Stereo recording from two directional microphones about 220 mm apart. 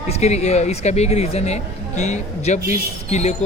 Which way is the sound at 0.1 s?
30° left (ahead or behind).